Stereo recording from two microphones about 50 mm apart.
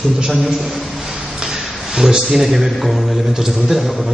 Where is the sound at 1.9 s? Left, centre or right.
Centre.